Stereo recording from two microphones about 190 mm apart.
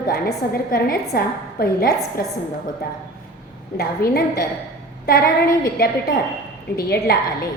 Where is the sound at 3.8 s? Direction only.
55° left (ahead or behind).